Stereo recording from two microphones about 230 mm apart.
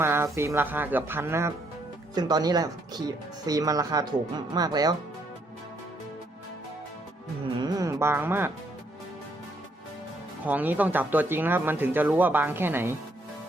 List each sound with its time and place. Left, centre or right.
0.0 s speech: centre
7.6 s speech: centre
10.4 s speech: centre